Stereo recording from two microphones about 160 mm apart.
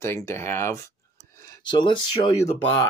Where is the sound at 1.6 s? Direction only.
30° left (ahead or behind).